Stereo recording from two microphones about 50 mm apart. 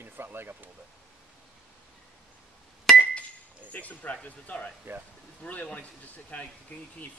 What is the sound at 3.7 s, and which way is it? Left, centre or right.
Speech, left.